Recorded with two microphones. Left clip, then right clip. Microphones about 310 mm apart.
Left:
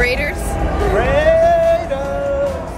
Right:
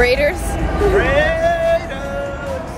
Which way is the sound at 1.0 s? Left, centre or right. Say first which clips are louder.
Left 3 dB; centre.